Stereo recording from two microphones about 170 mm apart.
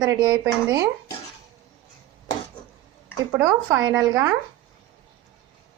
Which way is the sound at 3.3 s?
15° right (ahead or behind).